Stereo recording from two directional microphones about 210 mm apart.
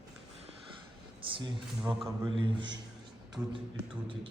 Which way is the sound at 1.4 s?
20° right (ahead or behind).